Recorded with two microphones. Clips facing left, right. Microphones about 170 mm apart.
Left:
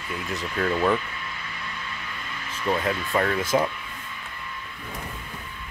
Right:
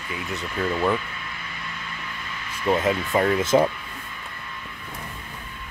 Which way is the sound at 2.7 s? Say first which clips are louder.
Right 4 dB; 20° right (ahead or behind).